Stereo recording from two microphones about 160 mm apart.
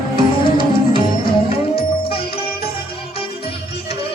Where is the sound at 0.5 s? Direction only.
30° left (ahead or behind).